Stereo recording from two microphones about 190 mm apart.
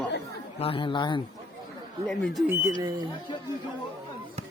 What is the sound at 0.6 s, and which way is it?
Speech, 25° left (ahead or behind).